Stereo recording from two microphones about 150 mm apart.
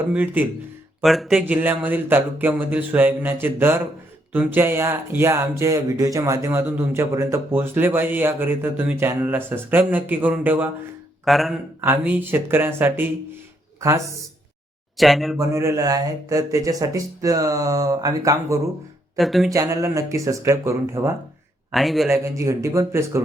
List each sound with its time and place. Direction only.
0.1 s speech: 10° right (ahead or behind)
1.0 s speech: centre (ahead or behind)
11.3 s speech: centre (ahead or behind)
11.8 s speech: 10° right (ahead or behind)
14.9 s speech: centre (ahead or behind)
15.4 s speech: 20° right (ahead or behind)
19.1 s speech: centre (ahead or behind)
19.5 s speech: 20° right (ahead or behind)
21.7 s speech: centre (ahead or behind)
22.1 s speech: 20° right (ahead or behind)